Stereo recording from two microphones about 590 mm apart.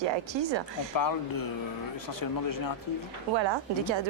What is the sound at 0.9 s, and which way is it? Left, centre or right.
Speech, left.